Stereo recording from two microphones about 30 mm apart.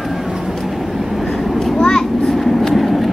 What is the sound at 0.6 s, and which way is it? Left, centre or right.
Train, centre.